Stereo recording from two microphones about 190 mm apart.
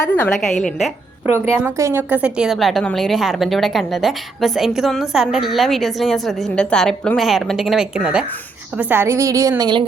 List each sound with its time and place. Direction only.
0.1 s a woman's voice: 5° left (ahead or behind)
1.3 s a woman's voice: 10° right (ahead or behind)